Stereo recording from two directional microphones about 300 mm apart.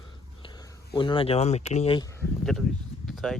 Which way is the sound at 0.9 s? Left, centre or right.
Centre.